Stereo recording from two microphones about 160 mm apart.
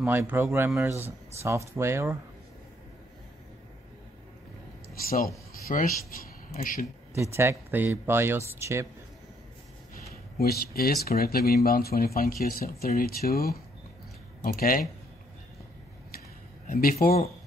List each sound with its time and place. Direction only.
0.0 s speech: 10° right (ahead or behind)
5.7 s speech: 50° left (ahead or behind)
7.2 s speech: 15° right (ahead or behind)
10.3 s speech: 70° left (ahead or behind)
16.6 s speech: 65° left (ahead or behind)